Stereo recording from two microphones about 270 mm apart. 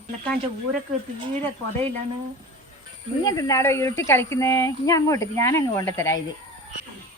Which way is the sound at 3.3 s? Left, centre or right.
Centre.